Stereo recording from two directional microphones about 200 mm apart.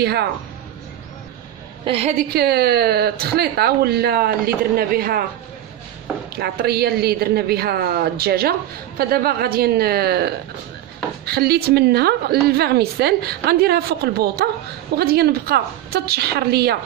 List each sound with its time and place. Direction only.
0.0 s a woman's voice: 50° right (ahead or behind)
1.9 s a woman's voice: 30° right (ahead or behind)
2.3 s a woman's voice: 50° right (ahead or behind)
6.3 s a woman's voice: 50° right (ahead or behind)